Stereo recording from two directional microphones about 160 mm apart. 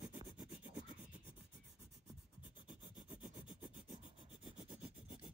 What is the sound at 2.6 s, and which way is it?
Rub, 10° right (ahead or behind).